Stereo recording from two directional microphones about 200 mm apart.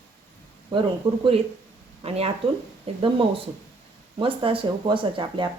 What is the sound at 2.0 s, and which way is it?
Speech, 30° right (ahead or behind).